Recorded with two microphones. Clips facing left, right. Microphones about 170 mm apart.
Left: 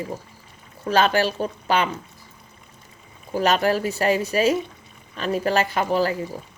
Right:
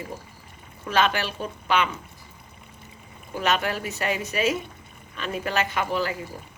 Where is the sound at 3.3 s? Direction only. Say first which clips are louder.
Left 6 dB; 35° left (ahead or behind).